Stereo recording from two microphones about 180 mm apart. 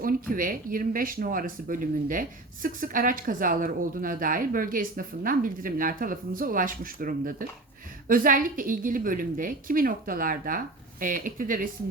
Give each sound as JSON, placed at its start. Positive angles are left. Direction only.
{"t": 0.0, "sound": "speech", "side_deg": -50}